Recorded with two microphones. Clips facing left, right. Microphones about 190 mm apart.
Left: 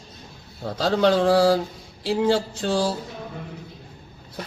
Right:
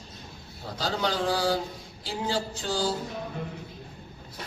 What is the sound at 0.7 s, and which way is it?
Speech, 65° left (ahead or behind).